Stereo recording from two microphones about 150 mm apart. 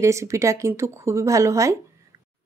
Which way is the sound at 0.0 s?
20° right (ahead or behind).